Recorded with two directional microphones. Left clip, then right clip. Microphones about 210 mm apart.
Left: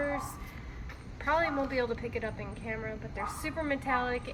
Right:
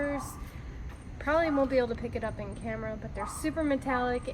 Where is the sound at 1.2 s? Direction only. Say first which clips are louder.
Right 2 dB; 25° left (ahead or behind).